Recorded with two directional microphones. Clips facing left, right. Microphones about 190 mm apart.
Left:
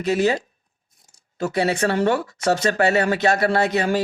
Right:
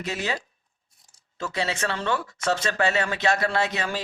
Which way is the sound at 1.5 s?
40° left (ahead or behind).